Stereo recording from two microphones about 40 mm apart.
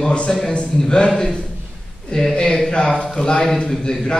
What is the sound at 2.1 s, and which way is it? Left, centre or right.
A man's voice, centre.